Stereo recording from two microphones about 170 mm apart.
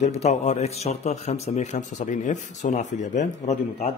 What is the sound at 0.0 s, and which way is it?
A man's voice, 40° left (ahead or behind).